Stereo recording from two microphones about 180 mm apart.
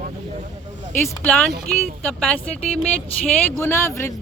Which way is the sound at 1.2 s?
10° left (ahead or behind).